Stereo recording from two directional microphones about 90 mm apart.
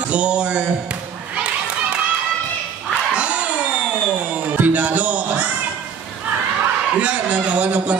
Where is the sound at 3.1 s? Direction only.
15° right (ahead or behind).